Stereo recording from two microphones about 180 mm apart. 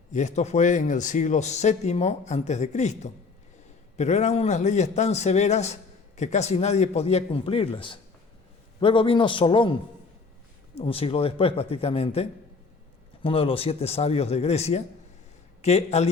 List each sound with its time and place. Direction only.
0.1 s a man's voice: 40° left (ahead or behind)
10.8 s a man's voice: 30° left (ahead or behind)